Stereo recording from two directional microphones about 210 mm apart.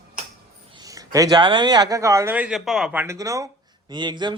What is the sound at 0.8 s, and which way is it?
A man's voice, 15° right (ahead or behind).